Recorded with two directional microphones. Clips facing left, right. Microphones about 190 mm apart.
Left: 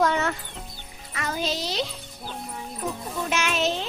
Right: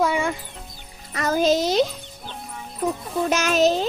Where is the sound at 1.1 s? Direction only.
40° right (ahead or behind).